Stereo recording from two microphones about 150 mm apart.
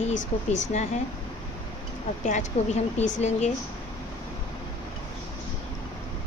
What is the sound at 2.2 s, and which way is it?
Speech, 50° left (ahead or behind).